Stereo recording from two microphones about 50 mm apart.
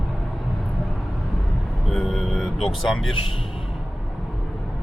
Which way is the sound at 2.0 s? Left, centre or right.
Centre.